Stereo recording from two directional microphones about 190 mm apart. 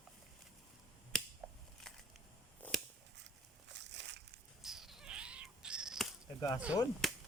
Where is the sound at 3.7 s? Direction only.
65° right (ahead or behind).